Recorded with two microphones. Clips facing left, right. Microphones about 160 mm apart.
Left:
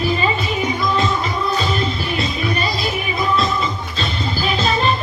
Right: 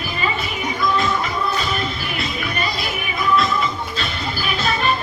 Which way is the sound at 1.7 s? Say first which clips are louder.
Left 4 dB; 30° left (ahead or behind).